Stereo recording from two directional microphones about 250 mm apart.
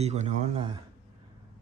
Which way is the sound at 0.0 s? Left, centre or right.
Right.